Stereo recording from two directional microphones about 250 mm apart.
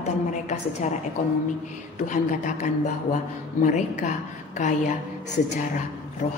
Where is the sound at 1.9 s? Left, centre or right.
Left.